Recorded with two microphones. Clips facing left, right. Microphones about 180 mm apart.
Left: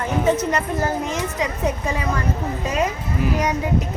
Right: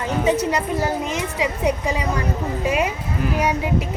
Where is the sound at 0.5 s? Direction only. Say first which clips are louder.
Even; 15° right (ahead or behind).